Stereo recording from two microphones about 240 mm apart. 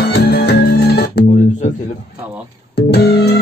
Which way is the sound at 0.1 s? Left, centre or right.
Left.